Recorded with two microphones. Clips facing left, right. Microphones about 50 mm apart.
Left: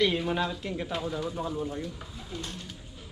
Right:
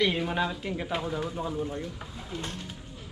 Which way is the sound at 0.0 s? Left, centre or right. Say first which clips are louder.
Even; centre.